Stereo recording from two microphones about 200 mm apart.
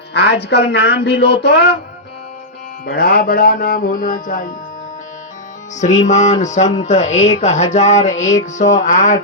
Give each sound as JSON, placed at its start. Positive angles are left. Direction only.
{"t": 0.1, "sound": "a woman's voice", "side_deg": 60}
{"t": 2.8, "sound": "music", "side_deg": 50}
{"t": 5.8, "sound": "music", "side_deg": 35}